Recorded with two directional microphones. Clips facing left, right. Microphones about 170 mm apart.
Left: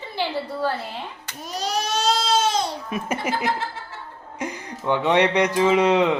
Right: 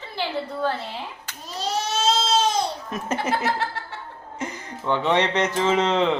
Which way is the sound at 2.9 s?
10° left (ahead or behind).